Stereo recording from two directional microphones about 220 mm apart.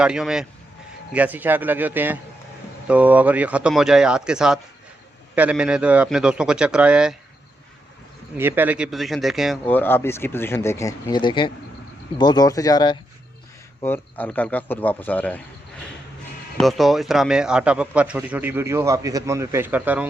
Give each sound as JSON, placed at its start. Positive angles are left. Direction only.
{"t": 0.0, "sound": "a man's voice", "side_deg": -5}
{"t": 8.4, "sound": "speech", "side_deg": -10}
{"t": 13.8, "sound": "speech", "side_deg": 10}
{"t": 16.6, "sound": "a man's voice", "side_deg": 0}